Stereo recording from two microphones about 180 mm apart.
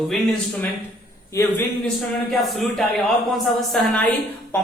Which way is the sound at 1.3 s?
15° left (ahead or behind).